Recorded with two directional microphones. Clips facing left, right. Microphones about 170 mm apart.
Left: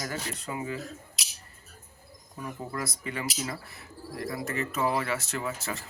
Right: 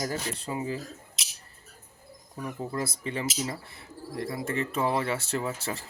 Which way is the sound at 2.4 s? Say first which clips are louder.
Right 3 dB; 30° right (ahead or behind).